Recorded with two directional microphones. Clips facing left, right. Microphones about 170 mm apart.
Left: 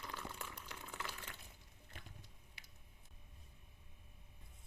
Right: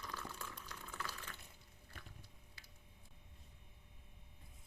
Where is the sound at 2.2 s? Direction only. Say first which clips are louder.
Even; 20° left (ahead or behind).